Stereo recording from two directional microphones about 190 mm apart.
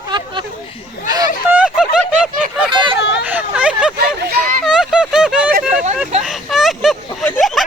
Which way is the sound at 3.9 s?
55° right (ahead or behind).